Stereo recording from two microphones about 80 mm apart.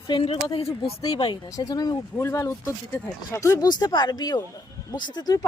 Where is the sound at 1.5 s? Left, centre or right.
Left.